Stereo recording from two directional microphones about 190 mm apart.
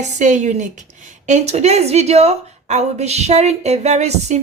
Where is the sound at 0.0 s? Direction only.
40° right (ahead or behind).